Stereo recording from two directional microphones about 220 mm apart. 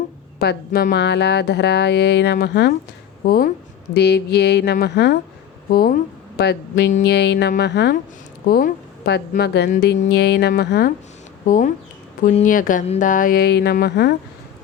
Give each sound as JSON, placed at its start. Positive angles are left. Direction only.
{"t": 0.3, "sound": "a woman's voice", "side_deg": 45}
{"t": 11.4, "sound": "speech", "side_deg": 35}